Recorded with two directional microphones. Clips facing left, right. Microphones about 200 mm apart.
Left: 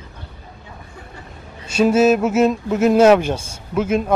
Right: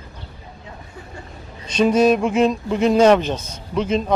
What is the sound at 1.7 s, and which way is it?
Speech, 5° left (ahead or behind).